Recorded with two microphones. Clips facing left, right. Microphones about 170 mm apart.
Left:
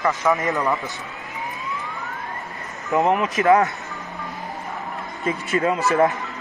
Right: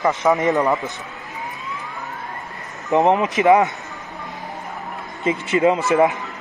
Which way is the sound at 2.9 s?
20° right (ahead or behind).